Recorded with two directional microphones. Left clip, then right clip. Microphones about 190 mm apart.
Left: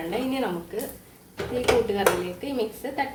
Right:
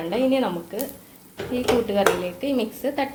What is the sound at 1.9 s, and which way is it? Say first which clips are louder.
A woman's voice: right 3 dB; 30° right (ahead or behind).